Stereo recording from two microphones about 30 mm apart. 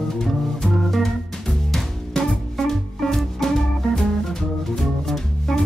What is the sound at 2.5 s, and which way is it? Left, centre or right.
Music, centre.